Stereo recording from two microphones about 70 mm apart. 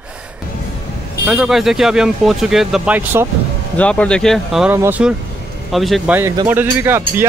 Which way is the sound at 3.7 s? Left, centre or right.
Centre.